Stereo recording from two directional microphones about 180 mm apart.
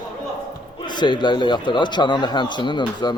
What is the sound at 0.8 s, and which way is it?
A man's voice, 25° left (ahead or behind).